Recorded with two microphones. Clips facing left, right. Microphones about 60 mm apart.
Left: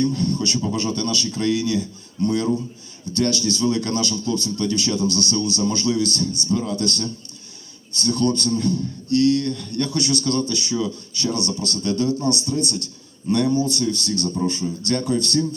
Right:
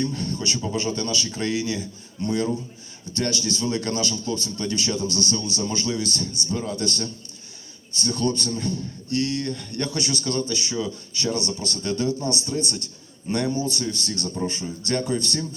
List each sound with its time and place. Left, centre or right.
0.0 s a man's voice: right